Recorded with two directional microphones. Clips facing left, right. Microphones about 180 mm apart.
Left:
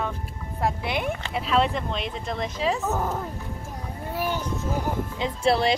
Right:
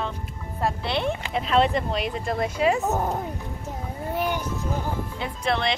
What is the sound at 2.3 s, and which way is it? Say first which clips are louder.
Speech: right 4 dB; 55° right (ahead or behind).